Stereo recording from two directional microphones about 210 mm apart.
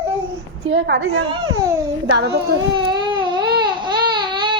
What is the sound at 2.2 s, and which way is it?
Speech, 50° right (ahead or behind).